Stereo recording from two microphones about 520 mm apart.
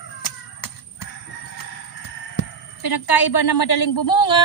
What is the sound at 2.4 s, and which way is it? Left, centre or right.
A woman's voice, left.